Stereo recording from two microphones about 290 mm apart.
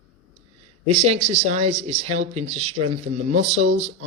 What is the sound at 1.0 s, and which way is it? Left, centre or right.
Speech, right.